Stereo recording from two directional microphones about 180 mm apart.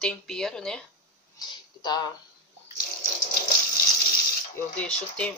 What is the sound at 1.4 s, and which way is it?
Speech, 25° left (ahead or behind).